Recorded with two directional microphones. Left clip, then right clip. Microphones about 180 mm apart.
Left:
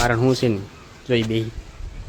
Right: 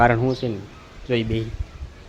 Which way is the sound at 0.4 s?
30° left (ahead or behind).